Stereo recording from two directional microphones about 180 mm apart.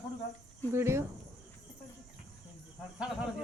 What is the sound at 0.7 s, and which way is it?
Speech, 15° right (ahead or behind).